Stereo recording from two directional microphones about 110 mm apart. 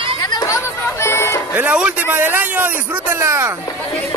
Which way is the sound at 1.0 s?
25° left (ahead or behind).